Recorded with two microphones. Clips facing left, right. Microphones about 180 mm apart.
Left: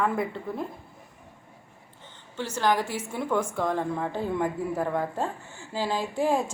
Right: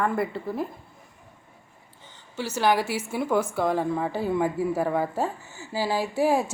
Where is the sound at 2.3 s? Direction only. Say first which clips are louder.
Right 2 dB; 10° right (ahead or behind).